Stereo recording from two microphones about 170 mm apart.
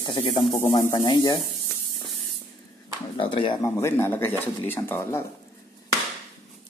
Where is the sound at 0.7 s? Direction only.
25° left (ahead or behind).